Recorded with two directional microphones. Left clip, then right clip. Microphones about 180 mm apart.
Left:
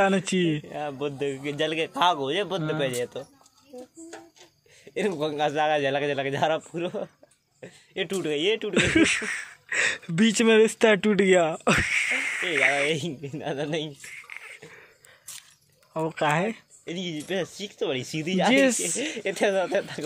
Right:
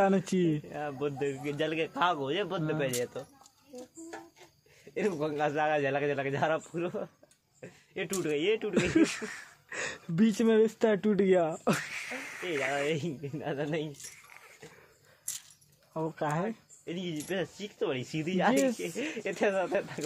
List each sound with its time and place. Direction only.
0.0 s a man's voice: 5° right (ahead or behind)
0.7 s a man's voice: 40° left (ahead or behind)
4.9 s a man's voice: 35° left (ahead or behind)
8.7 s speech: centre (ahead or behind)
12.8 s a man's voice: 40° left (ahead or behind)
14.4 s a sound: 5° left (ahead or behind)
15.9 s speech: 10° left (ahead or behind)
16.4 s speech: 40° left (ahead or behind)
18.5 s speech: 20° left (ahead or behind)
18.8 s speech: 50° left (ahead or behind)